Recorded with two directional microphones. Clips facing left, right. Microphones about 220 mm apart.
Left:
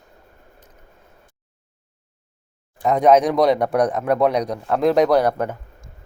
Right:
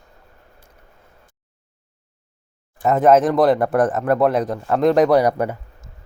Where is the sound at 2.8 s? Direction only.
5° right (ahead or behind).